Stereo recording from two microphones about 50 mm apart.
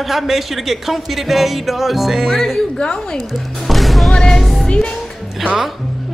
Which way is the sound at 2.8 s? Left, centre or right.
Centre.